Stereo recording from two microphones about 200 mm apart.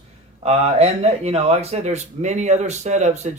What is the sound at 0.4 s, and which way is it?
Speech, 30° right (ahead or behind).